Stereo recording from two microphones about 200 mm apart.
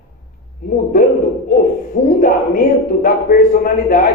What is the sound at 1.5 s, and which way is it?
Hoot, 45° left (ahead or behind).